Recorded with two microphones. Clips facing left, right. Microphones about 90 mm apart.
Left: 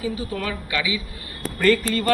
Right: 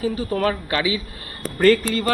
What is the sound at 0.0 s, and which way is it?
Speech, 45° right (ahead or behind).